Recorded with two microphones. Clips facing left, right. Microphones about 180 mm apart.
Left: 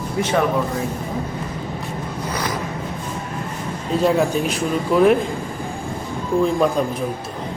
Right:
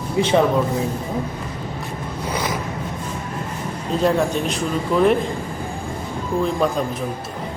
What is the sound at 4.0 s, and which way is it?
Speech, 5° left (ahead or behind).